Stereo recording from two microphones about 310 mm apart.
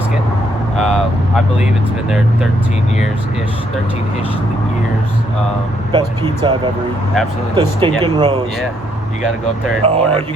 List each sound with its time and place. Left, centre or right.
2.0 s speech: centre
5.9 s speech: centre
9.8 s speech: centre